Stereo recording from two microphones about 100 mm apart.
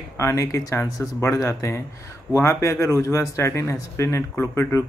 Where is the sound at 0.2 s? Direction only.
30° left (ahead or behind).